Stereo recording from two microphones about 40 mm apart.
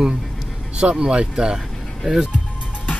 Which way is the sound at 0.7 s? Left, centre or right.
Right.